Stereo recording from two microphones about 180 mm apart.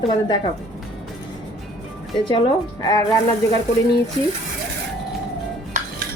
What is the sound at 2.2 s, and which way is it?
Speech, 25° left (ahead or behind).